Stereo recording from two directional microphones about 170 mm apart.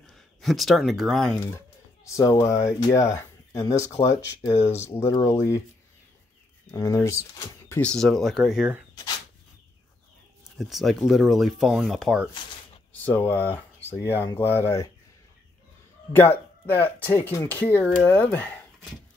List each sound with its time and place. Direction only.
0.0 s speech: centre (ahead or behind)
2.0 s speech: 20° left (ahead or behind)
6.7 s speech: 15° left (ahead or behind)
7.9 s speech: centre (ahead or behind)
10.6 s speech: centre (ahead or behind); by 14.9 s 15° left (ahead or behind)
16.1 s speech: 10° left (ahead or behind)